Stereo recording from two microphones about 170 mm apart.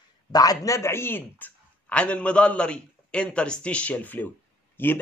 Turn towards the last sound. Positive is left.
turn(degrees=10)  # may be behind; listen again after turning